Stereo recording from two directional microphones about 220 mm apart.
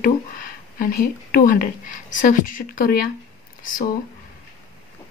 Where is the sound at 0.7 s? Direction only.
40° left (ahead or behind).